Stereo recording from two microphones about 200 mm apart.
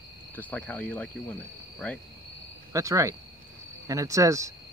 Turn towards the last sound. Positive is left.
turn(degrees=-15)  # may be behind; listen again after turning